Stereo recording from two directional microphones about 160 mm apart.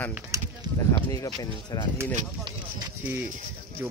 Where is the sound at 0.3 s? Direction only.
20° right (ahead or behind).